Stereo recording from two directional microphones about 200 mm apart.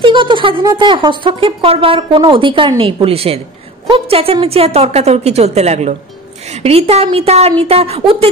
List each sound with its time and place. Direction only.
0.0 s a woman's voice: 25° right (ahead or behind)